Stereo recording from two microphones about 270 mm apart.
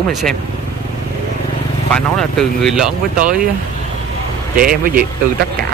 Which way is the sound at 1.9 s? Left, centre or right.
Centre.